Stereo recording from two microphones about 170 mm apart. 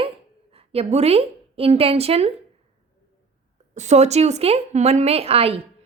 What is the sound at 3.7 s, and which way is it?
A woman's voice, 40° right (ahead or behind).